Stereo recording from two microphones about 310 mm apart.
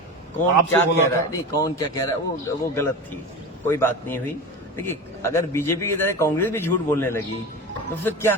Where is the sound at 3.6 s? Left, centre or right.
Centre.